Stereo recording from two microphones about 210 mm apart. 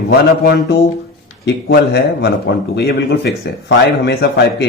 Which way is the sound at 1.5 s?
50° left (ahead or behind).